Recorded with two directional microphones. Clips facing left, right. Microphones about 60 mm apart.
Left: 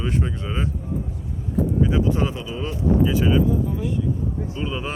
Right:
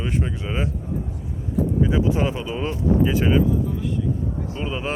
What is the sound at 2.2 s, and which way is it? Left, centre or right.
Speech, right.